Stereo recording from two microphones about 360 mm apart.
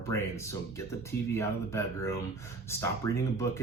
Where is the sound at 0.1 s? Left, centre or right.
Centre.